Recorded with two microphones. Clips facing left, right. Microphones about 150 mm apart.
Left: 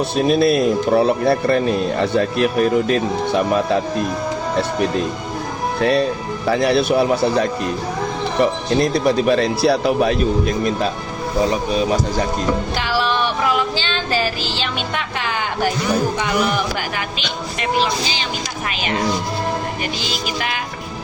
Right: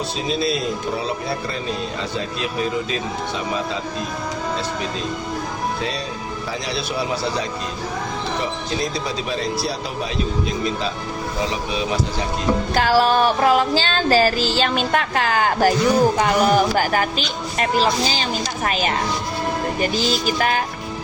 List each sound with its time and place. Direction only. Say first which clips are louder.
0.2 s speech: left 9 dB; 55° left (ahead or behind)
11.7 s speech: left 5 dB; 45° left (ahead or behind)
12.7 s music: right 4 dB; 45° right (ahead or behind)
16.1 s speech: right 3 dB; 40° right (ahead or behind)
17.6 s music: right 1 dB; 40° right (ahead or behind)
19.8 s music: right 4 dB; 40° right (ahead or behind)